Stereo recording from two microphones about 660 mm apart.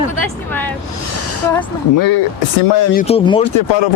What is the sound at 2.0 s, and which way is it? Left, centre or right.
Speech, left.